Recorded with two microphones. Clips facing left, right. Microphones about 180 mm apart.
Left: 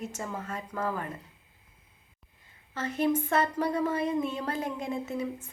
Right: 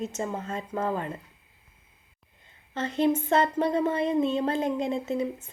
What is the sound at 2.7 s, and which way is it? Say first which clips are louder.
Speech: right 3 dB; 25° right (ahead or behind).